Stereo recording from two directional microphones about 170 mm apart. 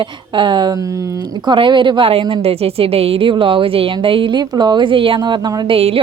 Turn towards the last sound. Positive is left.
turn(degrees=-35)  # may be behind; listen again after turning